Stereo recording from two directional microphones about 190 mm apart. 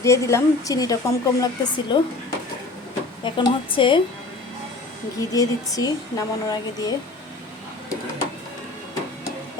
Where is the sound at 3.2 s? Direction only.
25° left (ahead or behind).